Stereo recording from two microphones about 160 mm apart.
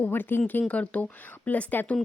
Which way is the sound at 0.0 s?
10° left (ahead or behind).